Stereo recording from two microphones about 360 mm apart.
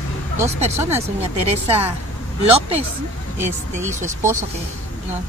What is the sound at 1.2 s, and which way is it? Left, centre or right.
Speech, centre.